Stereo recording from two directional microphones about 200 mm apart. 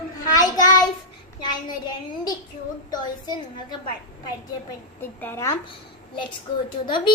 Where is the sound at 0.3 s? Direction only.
20° left (ahead or behind).